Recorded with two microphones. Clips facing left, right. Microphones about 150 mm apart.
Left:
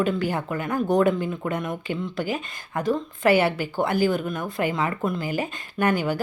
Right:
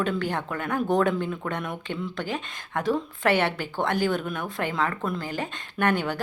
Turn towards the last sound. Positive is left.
turn(degrees=5)  # may be behind; listen again after turning